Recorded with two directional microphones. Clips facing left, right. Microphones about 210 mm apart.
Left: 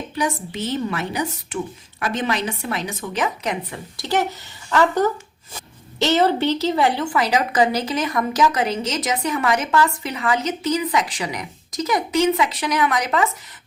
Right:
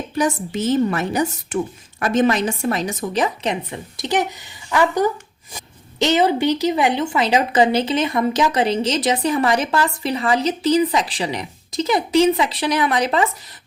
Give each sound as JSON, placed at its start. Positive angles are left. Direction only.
{"t": 0.2, "sound": "a woman's voice", "side_deg": -45}